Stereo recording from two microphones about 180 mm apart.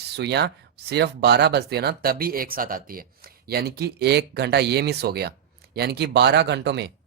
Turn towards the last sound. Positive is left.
turn(degrees=-70)  # may be behind; listen again after turning